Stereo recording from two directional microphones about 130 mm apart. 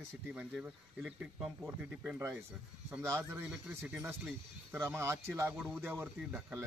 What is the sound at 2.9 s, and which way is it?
Speech, 20° right (ahead or behind).